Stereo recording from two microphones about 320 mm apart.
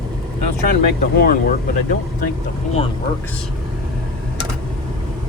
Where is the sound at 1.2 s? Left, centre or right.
Left.